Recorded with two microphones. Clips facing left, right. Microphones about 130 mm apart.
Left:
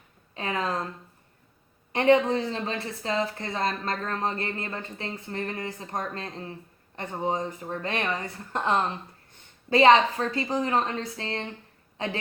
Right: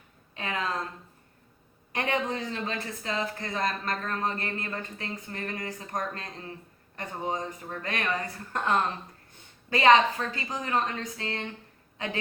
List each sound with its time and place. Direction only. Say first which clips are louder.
0.3 s a woman's voice: left 3 dB; 30° left (ahead or behind)
1.9 s a woman's voice: left 9 dB; 30° left (ahead or behind)